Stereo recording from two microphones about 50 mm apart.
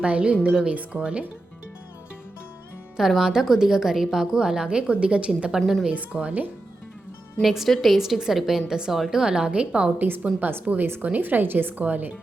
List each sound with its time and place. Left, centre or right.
0.0 s a woman's voice: right
3.2 s a woman's voice: centre
5.5 s a woman's voice: centre
5.9 s a woman's voice: right
7.4 s a woman's voice: centre; by 9.9 s right
10.4 s a woman's voice: right